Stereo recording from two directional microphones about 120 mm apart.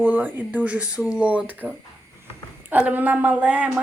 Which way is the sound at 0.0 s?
15° right (ahead or behind).